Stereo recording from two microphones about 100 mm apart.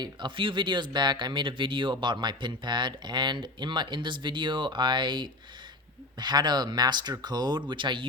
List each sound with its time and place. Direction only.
0.0 s speech: 50° right (ahead or behind)